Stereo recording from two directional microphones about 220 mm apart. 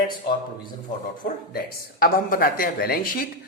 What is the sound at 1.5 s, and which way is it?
Speech, 40° left (ahead or behind).